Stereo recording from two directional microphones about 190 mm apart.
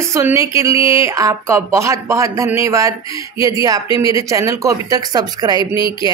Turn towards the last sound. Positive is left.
turn(degrees=25)  # may be behind; listen again after turning